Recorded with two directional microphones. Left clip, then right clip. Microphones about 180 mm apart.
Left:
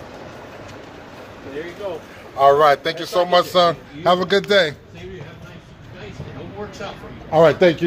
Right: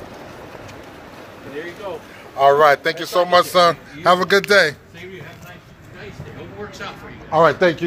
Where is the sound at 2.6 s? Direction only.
10° right (ahead or behind).